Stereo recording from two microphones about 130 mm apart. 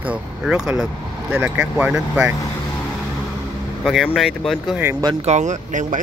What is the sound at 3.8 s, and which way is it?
Speech, centre (ahead or behind).